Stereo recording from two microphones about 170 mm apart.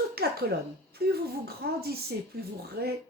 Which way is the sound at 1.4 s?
65° right (ahead or behind).